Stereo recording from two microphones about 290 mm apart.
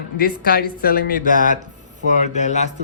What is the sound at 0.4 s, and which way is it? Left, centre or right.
A woman's voice, left.